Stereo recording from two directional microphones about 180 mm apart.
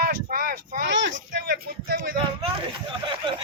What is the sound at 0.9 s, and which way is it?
Speech, 90° right.